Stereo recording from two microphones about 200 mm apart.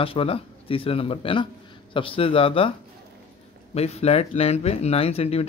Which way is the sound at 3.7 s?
30° left (ahead or behind).